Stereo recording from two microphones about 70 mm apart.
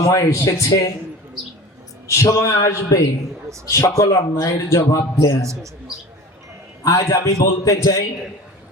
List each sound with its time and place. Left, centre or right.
0.1 s a man's voice: left
0.7 s a man's voice: left
2.0 s a man's voice: left
4.8 s a man's voice: left
6.8 s a man's voice: left